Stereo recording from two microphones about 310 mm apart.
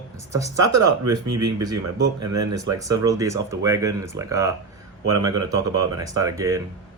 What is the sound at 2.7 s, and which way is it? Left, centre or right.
Speech, centre.